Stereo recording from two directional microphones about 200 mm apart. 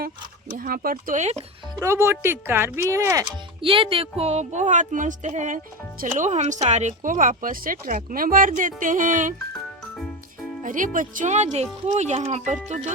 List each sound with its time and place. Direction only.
0.5 s speech: 45° right (ahead or behind)
1.8 s speech: 15° right (ahead or behind)
3.6 s speech: 25° right (ahead or behind)
10.6 s speech: 40° right (ahead or behind)